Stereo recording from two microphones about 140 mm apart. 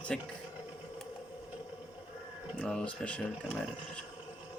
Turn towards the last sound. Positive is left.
turn(degrees=10)  # may be behind; listen again after turning